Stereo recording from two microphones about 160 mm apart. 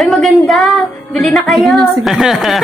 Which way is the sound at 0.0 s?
Centre (ahead or behind).